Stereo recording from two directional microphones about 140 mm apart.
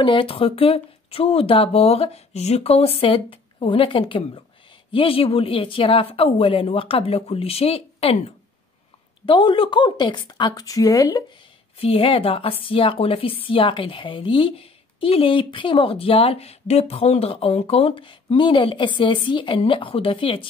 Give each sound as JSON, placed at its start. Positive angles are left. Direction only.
{"t": 0.0, "sound": "a woman's voice", "side_deg": 40}
{"t": 11.8, "sound": "a woman's voice", "side_deg": 40}